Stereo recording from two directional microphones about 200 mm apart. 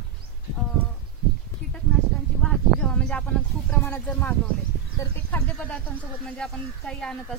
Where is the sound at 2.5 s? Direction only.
5° left (ahead or behind).